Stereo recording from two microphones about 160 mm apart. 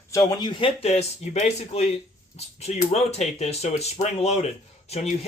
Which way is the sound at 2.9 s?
40° left (ahead or behind).